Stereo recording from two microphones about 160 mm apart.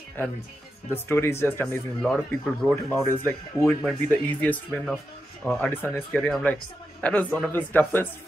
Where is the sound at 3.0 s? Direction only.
15° left (ahead or behind).